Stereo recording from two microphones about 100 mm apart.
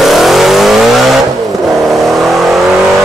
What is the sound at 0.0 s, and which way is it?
Vehicle, centre (ahead or behind).